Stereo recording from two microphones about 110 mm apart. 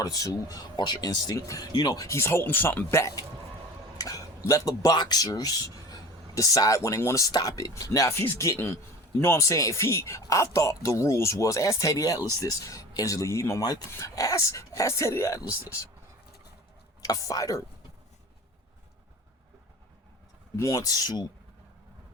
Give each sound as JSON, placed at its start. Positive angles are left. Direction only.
{"t": 0.0, "sound": "speech", "side_deg": 30}
{"t": 2.0, "sound": "speech", "side_deg": 25}
{"t": 3.9, "sound": "a sound", "side_deg": 35}
{"t": 4.4, "sound": "speech", "side_deg": 30}
{"t": 17.0, "sound": "speech", "side_deg": 30}
{"t": 20.6, "sound": "speech", "side_deg": 30}